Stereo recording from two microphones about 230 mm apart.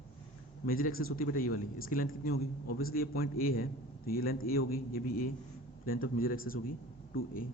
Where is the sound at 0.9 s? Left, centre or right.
Left.